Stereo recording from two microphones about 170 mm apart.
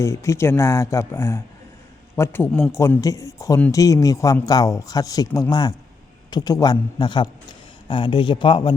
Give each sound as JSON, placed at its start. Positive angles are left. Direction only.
{"t": 0.0, "sound": "speech", "side_deg": 15}